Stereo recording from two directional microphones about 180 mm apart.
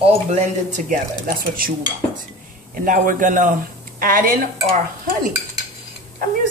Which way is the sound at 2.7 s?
45° right (ahead or behind).